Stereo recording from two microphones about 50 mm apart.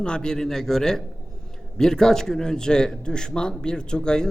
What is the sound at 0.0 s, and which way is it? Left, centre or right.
A man's voice, centre.